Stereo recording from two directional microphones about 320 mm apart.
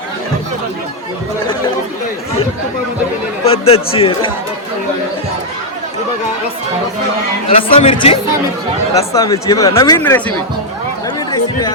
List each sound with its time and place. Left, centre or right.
3.4 s speech: centre
7.5 s speech: centre